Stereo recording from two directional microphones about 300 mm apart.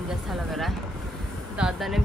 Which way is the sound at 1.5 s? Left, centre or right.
Centre.